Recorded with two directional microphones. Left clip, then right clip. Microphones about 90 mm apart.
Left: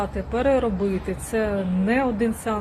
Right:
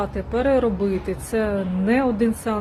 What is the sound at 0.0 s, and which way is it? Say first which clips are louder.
Speech: right 1 dB; 40° right (ahead or behind).